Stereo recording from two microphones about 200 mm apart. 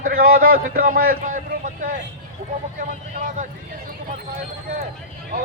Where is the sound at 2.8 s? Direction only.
40° right (ahead or behind).